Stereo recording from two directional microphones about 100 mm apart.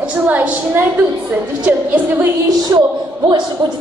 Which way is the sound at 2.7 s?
35° right (ahead or behind).